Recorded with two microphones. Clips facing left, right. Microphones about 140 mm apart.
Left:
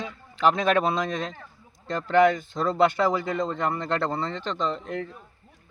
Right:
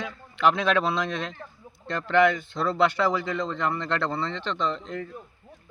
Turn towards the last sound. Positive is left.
turn(degrees=70)  # may be behind; listen again after turning